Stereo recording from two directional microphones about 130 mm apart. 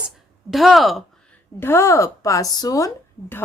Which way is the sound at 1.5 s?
20° left (ahead or behind).